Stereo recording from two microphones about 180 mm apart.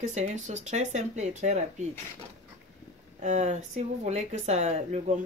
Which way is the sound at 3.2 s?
40° right (ahead or behind).